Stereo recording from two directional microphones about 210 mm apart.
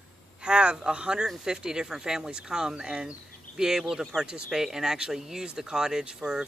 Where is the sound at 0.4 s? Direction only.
5° right (ahead or behind).